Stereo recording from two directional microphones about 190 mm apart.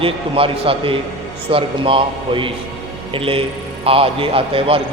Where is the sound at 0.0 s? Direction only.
30° right (ahead or behind).